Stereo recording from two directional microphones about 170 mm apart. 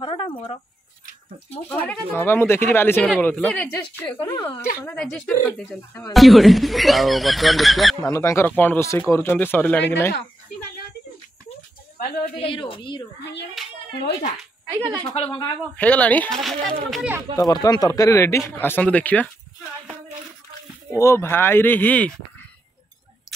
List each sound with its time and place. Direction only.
0.0 s a sound: 30° left (ahead or behind)
1.7 s speech: 10° left (ahead or behind)
8.1 s speech: 15° left (ahead or behind)
12.4 s a woman's voice: 30° left (ahead or behind)
13.2 s a child's voice: 90° left
15.1 s a woman's voice: 30° left (ahead or behind)
15.7 s speech: 10° left (ahead or behind)
17.4 s speech: 20° left (ahead or behind)
20.9 s speech: 15° left (ahead or behind)